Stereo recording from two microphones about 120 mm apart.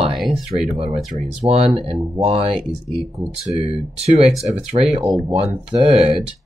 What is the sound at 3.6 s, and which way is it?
Speech, 60° right (ahead or behind).